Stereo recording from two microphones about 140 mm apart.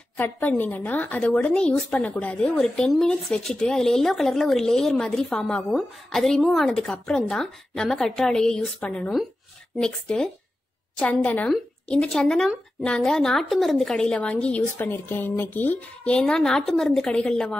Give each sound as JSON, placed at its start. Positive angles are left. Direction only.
{"t": 0.2, "sound": "a woman's voice", "side_deg": 15}